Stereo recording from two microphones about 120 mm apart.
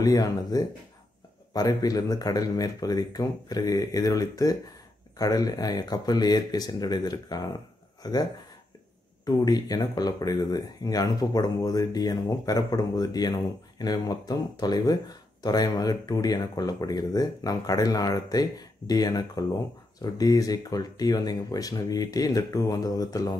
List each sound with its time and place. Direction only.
0.0 s speech: 30° left (ahead or behind)